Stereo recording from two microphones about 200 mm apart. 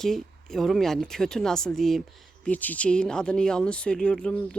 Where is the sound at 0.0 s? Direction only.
Centre (ahead or behind).